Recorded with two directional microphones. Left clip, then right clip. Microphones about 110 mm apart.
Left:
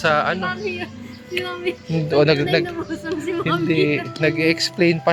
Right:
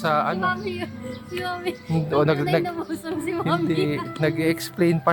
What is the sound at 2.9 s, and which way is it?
Speech, 30° right (ahead or behind).